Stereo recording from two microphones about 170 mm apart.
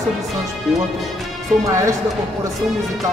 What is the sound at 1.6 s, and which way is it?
Speech, 15° right (ahead or behind).